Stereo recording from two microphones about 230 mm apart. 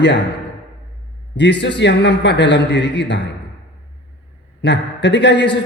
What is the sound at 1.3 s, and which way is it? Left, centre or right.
A man's voice, left.